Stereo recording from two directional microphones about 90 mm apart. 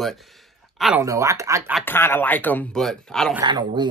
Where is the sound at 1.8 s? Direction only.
25° left (ahead or behind).